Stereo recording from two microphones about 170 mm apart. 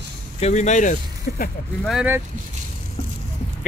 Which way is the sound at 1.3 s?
60° left (ahead or behind).